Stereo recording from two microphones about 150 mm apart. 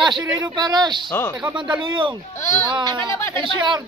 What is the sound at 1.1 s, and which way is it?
Speech, 15° left (ahead or behind).